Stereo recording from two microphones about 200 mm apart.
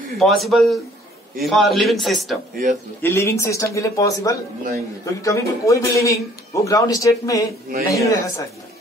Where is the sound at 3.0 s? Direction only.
10° left (ahead or behind).